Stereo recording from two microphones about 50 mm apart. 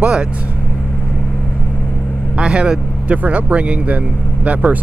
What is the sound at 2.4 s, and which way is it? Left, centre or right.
Speech, right.